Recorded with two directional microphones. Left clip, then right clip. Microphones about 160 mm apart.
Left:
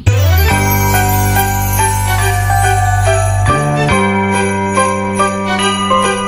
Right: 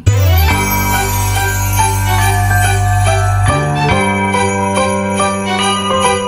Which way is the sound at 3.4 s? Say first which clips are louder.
Left 1 dB; centre (ahead or behind).